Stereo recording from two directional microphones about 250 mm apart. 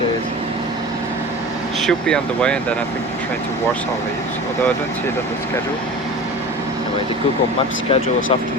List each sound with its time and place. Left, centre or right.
1.9 s speech: centre